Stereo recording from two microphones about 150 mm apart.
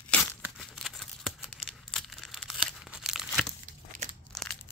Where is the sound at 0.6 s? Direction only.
Centre (ahead or behind).